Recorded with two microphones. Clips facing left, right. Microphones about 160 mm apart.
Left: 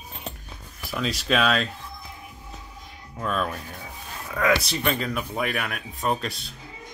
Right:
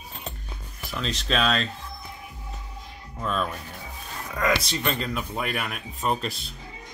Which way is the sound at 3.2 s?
5° left (ahead or behind).